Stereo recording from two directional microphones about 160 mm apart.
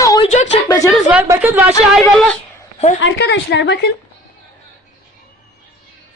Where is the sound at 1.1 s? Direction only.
10° right (ahead or behind).